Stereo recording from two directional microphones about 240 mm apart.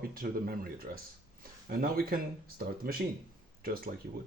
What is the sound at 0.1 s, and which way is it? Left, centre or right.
Speech, right.